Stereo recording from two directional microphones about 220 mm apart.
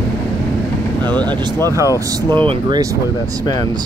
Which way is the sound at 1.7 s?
15° right (ahead or behind).